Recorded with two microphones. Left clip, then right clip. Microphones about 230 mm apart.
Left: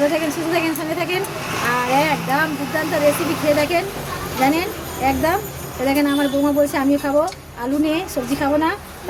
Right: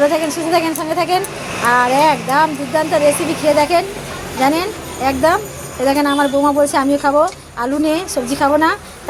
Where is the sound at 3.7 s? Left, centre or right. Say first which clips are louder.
Right 4 dB; centre.